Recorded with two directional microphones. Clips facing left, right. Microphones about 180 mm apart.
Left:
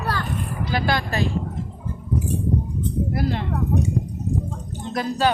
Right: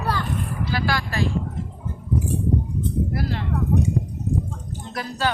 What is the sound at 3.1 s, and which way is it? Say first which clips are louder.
Speech: left 3 dB; 20° left (ahead or behind).